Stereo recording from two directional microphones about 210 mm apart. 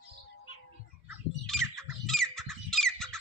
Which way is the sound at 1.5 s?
Centre (ahead or behind).